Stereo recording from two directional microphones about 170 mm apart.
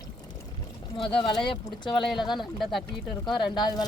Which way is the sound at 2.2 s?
25° left (ahead or behind).